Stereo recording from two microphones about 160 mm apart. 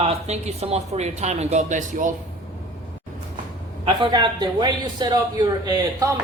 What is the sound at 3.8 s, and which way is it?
A man's voice, 30° right (ahead or behind).